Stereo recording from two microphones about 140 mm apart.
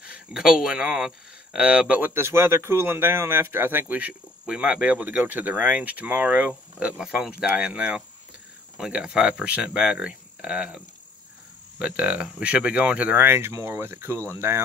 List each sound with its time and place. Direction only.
0.0 s speech: 5° right (ahead or behind)
11.8 s speech: 10° right (ahead or behind)